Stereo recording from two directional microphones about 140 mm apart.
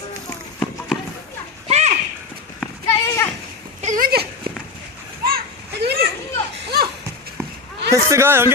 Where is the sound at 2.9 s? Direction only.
25° left (ahead or behind).